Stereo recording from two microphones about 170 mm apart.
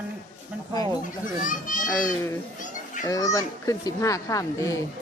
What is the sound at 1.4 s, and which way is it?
Speech, 50° left (ahead or behind).